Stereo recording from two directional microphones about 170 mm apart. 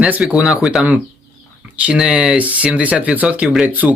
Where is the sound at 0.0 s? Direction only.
5° right (ahead or behind).